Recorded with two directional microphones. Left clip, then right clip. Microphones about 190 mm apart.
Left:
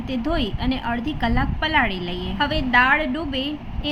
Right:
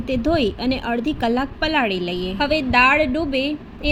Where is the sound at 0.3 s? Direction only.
20° right (ahead or behind).